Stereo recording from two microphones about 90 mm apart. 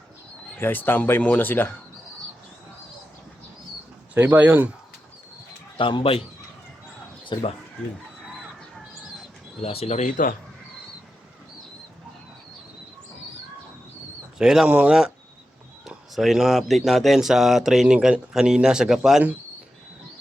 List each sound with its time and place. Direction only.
0.6 s speech: 20° left (ahead or behind)
4.1 s speech: 20° right (ahead or behind)
5.7 s a man's voice: 70° left (ahead or behind); by 6.2 s 90° left
7.3 s speech: 60° left (ahead or behind)
14.3 s speech: 5° right (ahead or behind)
16.1 s a man's voice: 5° right (ahead or behind)